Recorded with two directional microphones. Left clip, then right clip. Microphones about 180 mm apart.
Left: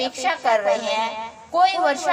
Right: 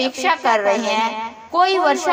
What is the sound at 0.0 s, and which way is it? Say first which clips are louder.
A woman's voice: right 4 dB; 20° right (ahead or behind).